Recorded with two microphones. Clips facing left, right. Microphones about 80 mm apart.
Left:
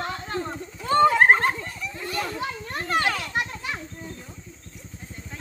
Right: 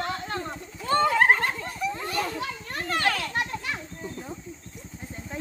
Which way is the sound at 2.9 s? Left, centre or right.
Centre.